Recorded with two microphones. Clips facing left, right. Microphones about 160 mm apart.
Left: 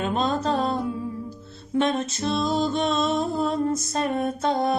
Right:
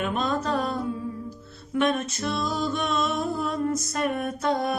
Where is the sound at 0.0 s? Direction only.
25° left (ahead or behind).